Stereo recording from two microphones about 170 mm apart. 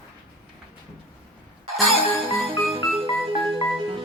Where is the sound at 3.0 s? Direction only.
30° right (ahead or behind).